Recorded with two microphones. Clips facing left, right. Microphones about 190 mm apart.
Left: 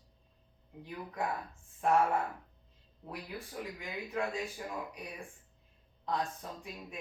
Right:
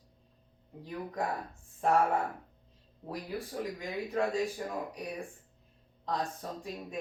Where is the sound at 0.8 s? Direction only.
35° right (ahead or behind).